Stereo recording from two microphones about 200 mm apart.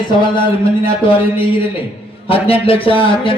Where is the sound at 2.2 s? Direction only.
30° left (ahead or behind).